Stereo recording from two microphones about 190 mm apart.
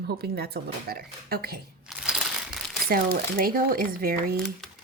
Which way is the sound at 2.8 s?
50° right (ahead or behind).